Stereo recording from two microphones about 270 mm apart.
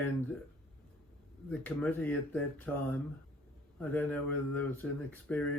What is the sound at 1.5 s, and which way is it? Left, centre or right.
Speech, centre.